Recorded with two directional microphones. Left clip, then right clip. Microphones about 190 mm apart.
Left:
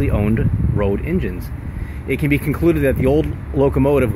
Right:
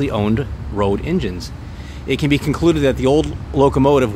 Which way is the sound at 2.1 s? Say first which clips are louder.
Right 1 dB; 90° right.